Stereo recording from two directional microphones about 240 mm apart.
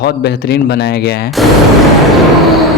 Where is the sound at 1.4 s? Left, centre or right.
Centre.